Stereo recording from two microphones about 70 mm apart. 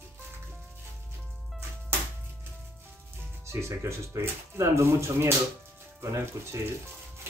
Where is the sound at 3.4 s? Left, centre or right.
Right.